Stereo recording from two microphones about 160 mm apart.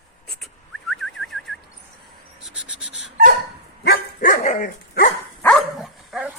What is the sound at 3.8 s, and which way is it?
Dog, 80° left.